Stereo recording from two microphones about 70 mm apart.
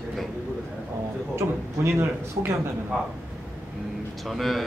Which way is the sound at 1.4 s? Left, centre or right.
Right.